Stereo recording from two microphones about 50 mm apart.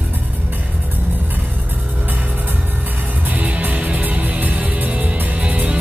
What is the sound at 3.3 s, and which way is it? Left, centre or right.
Music, right.